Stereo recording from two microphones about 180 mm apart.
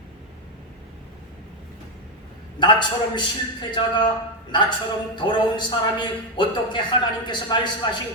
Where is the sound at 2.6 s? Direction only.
25° left (ahead or behind).